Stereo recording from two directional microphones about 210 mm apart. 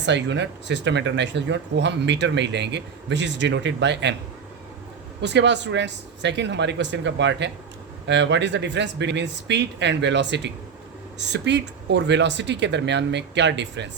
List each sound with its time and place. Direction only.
0.0 s speech: 55° right (ahead or behind)
5.2 s speech: 55° right (ahead or behind)